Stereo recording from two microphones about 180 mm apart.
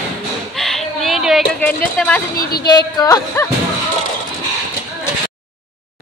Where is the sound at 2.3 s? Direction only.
55° left (ahead or behind).